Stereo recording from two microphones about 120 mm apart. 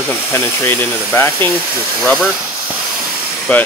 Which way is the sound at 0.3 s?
20° left (ahead or behind).